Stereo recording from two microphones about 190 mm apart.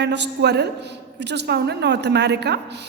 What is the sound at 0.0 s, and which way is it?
A woman's voice, 65° right (ahead or behind).